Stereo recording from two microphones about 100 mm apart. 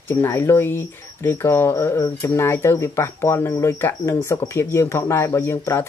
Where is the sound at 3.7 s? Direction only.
20° left (ahead or behind).